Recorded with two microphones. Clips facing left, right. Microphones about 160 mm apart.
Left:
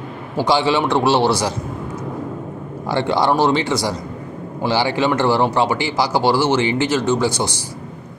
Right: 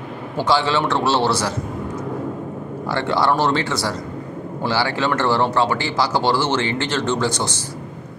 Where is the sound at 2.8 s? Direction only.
15° left (ahead or behind).